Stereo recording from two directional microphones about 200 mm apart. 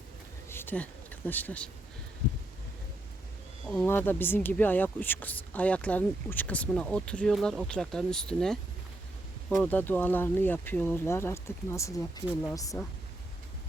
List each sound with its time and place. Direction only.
0.4 s a sound: 10° left (ahead or behind)
3.7 s speech: 5° left (ahead or behind)
9.6 s speech: 10° left (ahead or behind)